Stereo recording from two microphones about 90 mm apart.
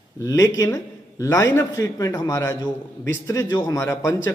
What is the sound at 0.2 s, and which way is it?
A man's voice, 35° left (ahead or behind).